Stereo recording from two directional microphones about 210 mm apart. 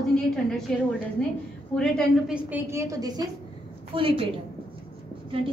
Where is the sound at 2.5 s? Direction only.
10° right (ahead or behind).